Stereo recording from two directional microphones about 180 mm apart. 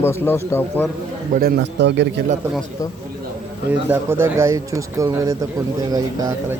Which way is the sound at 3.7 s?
10° right (ahead or behind).